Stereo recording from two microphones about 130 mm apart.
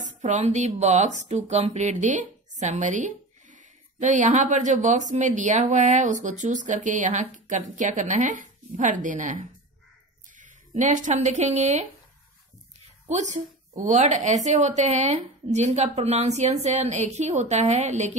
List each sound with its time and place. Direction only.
0.0 s speech: 65° right (ahead or behind)
13.0 s a woman's voice: 65° right (ahead or behind)